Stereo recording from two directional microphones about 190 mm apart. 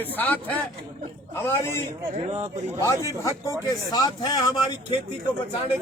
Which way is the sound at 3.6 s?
20° left (ahead or behind).